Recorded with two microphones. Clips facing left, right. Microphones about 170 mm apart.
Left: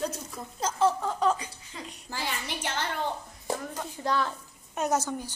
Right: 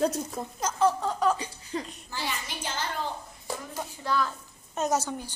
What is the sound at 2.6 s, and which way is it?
Speech, 65° left (ahead or behind).